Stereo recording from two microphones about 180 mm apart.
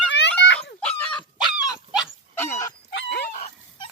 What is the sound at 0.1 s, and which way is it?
Dog, 80° left.